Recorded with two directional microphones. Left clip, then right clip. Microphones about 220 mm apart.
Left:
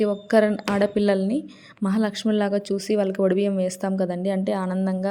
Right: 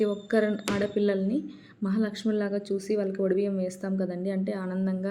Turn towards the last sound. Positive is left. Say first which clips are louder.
# left 6 dB
turn(degrees=25)  # may be behind; listen again after turning